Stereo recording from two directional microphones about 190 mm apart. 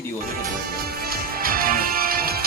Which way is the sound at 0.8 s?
50° right (ahead or behind).